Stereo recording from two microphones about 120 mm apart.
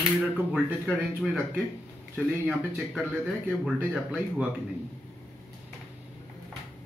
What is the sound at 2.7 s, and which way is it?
Speech, 5° right (ahead or behind).